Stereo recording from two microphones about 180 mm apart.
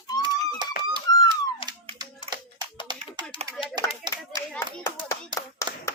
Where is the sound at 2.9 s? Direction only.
25° right (ahead or behind).